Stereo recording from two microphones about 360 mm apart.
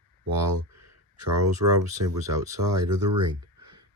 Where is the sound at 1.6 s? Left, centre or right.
Right.